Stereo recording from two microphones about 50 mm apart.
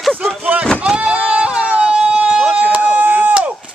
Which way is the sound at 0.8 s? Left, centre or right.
Centre.